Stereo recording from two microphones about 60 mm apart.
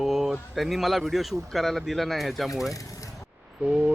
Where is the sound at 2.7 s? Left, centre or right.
Left.